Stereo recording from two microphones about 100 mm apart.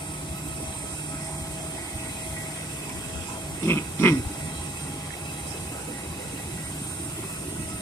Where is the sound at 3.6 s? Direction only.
25° left (ahead or behind).